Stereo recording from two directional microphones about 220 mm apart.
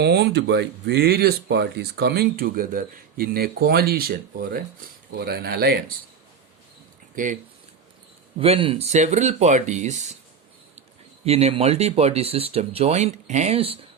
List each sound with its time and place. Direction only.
0.0 s speech: 50° right (ahead or behind)
8.4 s speech: 25° right (ahead or behind)
11.3 s speech: 30° right (ahead or behind)